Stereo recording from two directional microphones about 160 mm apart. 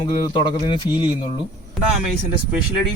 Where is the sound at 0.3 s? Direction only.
30° left (ahead or behind).